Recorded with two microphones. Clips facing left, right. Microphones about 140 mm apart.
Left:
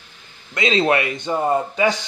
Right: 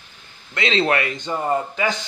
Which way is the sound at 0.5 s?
15° left (ahead or behind).